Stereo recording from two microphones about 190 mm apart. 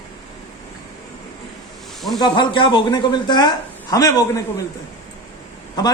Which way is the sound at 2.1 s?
25° left (ahead or behind).